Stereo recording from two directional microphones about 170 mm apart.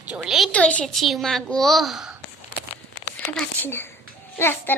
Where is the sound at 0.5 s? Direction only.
5° left (ahead or behind).